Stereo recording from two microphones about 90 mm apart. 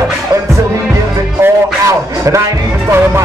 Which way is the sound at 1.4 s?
35° right (ahead or behind).